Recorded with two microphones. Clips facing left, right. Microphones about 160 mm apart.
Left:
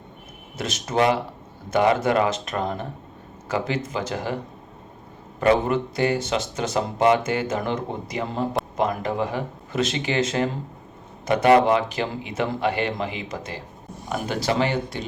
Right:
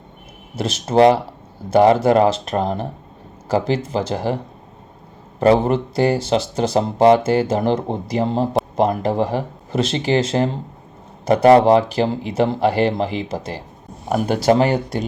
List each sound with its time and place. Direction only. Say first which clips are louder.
0.5 s speech: right 7 dB; 30° right (ahead or behind)
5.4 s speech: right 5 dB; 35° right (ahead or behind)